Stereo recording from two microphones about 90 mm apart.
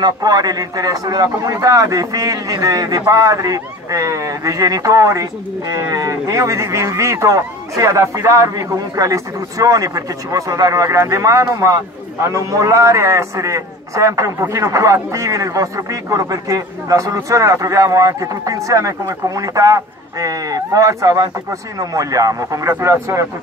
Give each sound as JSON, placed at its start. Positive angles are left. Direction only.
{"t": 0.0, "sound": "a man's voice", "side_deg": -45}